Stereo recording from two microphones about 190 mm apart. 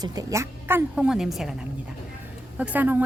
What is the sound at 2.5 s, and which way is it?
Speech, 10° right (ahead or behind).